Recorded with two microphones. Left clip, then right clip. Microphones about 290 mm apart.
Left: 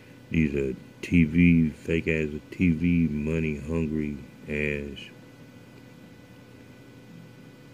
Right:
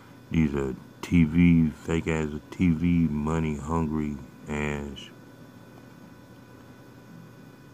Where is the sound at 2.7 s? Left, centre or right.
Right.